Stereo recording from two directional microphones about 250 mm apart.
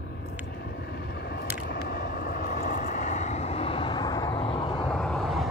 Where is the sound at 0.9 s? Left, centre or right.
Left; by 4.9 s centre.